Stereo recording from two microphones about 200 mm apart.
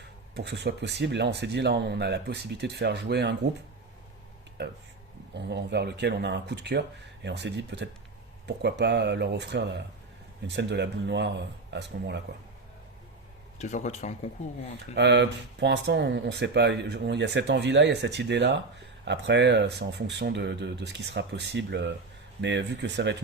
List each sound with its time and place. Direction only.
0.3 s speech: 55° right (ahead or behind)
5.3 s speech: 60° right (ahead or behind)
13.6 s speech: 35° left (ahead or behind)
14.9 s speech: 60° right (ahead or behind)